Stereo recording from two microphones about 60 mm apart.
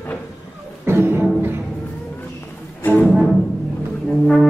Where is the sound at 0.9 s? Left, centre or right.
Right.